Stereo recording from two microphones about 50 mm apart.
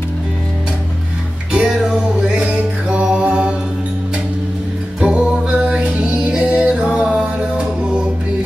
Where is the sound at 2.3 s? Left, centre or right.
Right.